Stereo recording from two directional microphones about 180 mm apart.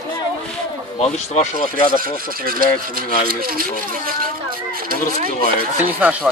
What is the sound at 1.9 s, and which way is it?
Speech, 55° right (ahead or behind).